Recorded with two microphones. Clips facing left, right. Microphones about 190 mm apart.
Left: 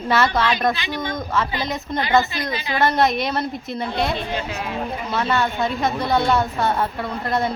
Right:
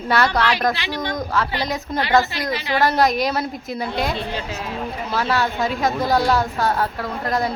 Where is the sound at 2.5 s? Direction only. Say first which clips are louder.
Right 4 dB; 70° right (ahead or behind).